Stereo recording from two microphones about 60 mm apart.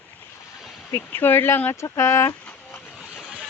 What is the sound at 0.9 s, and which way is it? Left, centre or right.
Speech, left.